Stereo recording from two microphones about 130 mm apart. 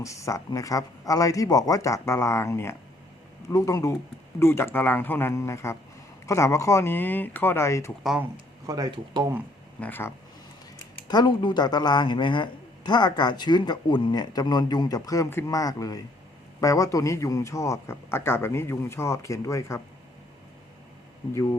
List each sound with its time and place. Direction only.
0.0 s a man's voice: 25° left (ahead or behind)
8.6 s speech: 30° right (ahead or behind)
9.8 s speech: 15° left (ahead or behind)
11.1 s a woman's voice: 35° left (ahead or behind)